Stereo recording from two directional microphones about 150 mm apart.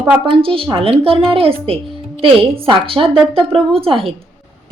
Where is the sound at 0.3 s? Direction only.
35° right (ahead or behind).